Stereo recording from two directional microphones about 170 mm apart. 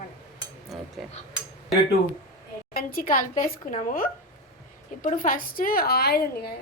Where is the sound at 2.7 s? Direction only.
55° left (ahead or behind).